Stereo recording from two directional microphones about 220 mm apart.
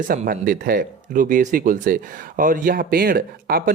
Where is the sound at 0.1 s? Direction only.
40° right (ahead or behind).